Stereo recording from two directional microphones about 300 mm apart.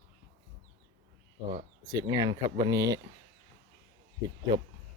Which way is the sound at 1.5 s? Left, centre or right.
Centre.